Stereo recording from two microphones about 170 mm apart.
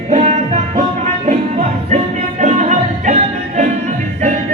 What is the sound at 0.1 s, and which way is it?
Music, 45° right (ahead or behind).